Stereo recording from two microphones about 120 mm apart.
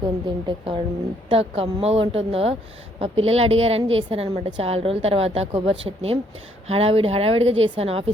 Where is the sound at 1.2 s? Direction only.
55° right (ahead or behind).